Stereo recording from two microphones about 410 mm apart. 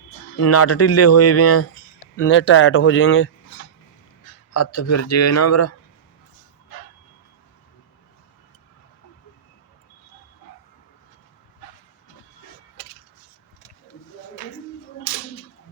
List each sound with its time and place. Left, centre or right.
0.3 s speech: left
4.5 s speech: left